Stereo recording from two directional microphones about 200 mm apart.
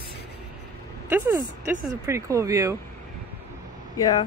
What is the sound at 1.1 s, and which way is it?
Speech, 10° right (ahead or behind).